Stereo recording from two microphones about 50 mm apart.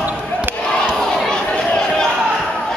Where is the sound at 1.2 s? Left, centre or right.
Centre.